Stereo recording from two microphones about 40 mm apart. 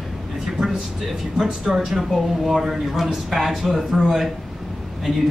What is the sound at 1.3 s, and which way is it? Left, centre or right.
A man's voice, centre.